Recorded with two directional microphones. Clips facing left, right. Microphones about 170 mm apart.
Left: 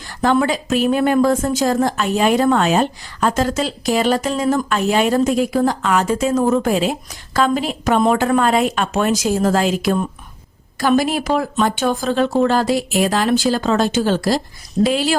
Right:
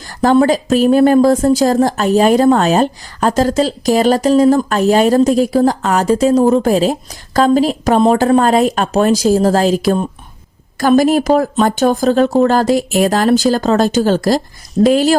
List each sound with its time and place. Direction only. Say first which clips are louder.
0.0 s speech: right 6 dB; 40° right (ahead or behind)